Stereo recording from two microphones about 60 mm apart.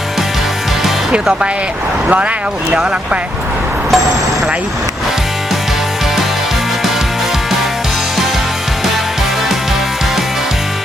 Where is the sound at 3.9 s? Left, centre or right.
Centre.